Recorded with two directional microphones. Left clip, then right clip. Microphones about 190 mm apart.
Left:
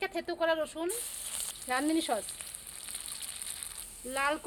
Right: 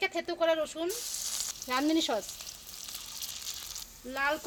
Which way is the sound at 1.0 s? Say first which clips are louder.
Right 5 dB; 10° left (ahead or behind).